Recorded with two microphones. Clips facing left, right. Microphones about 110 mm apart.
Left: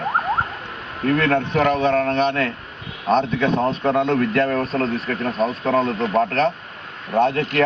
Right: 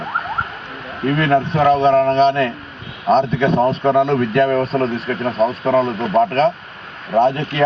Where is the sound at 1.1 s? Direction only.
5° right (ahead or behind).